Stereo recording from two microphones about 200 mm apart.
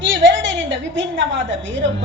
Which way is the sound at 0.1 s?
65° right (ahead or behind).